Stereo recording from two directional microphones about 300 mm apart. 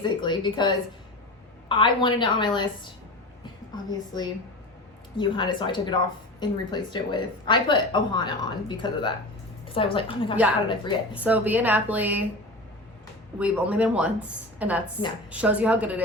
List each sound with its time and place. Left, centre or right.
0.0 s speech: centre
11.1 s speech: centre
13.4 s speech: centre